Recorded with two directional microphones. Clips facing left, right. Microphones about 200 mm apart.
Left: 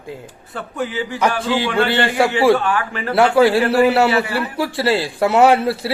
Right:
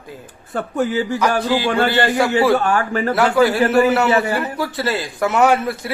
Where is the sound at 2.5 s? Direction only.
45° right (ahead or behind).